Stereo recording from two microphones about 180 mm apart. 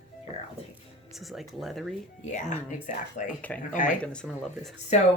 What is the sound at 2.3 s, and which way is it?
Speech, 40° left (ahead or behind).